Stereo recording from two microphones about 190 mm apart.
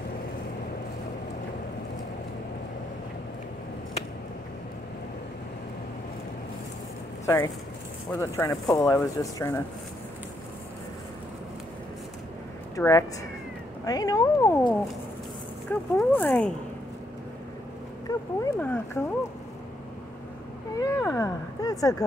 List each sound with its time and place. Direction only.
7.2 s speech: 15° left (ahead or behind)
12.7 s speech: 15° left (ahead or behind)
15.7 s speech: 5° left (ahead or behind)
18.0 s speech: 15° left (ahead or behind)
20.8 s a sound: 15° left (ahead or behind)